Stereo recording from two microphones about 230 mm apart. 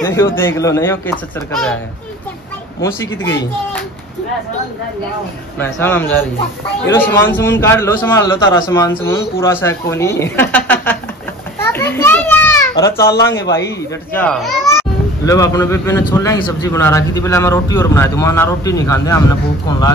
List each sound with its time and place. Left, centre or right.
0.0 s a man's voice: centre
5.6 s a man's voice: centre
11.6 s children playing: centre
13.1 s speech: left
14.1 s a man's voice: centre
15.2 s a man's voice: centre